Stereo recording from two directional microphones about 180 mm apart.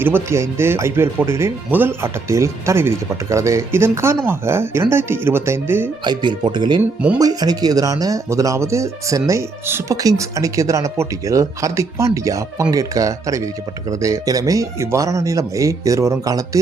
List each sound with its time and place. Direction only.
0.0 s speech: 15° right (ahead or behind)
6.1 s speech: 25° right (ahead or behind)